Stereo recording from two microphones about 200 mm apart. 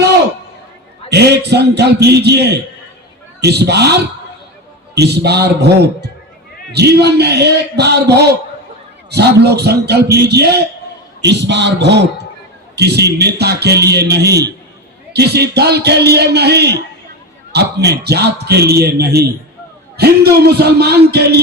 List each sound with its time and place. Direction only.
1.1 s a man's voice: 55° right (ahead or behind)
4.9 s a man's voice: 55° right (ahead or behind)